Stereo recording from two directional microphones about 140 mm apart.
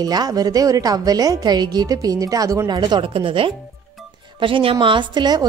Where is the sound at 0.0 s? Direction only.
30° right (ahead or behind).